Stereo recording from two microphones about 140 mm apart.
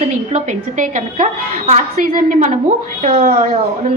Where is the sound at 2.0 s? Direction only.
80° right.